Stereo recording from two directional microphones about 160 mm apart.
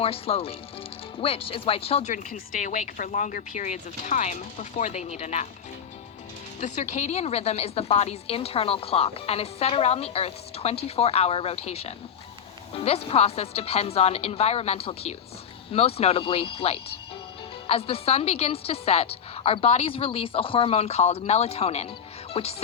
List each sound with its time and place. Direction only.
0.0 s a woman's voice: 35° left (ahead or behind)
6.6 s a woman's voice: 45° left (ahead or behind)